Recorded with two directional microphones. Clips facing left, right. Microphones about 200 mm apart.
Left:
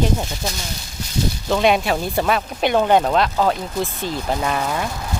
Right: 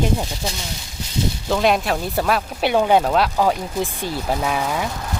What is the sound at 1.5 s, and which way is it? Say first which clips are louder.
Speech: left 1 dB; centre (ahead or behind).